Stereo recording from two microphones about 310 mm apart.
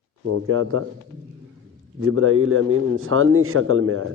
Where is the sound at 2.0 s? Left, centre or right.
Right.